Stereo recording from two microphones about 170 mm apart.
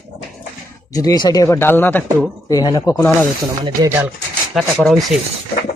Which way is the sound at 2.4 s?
25° left (ahead or behind).